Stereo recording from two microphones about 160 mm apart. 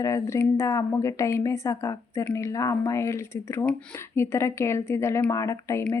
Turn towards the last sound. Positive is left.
turn(degrees=20)  # may be behind; listen again after turning